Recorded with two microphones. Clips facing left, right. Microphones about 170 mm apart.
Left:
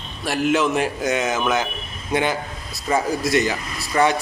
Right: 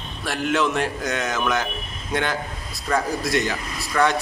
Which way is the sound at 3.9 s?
15° left (ahead or behind).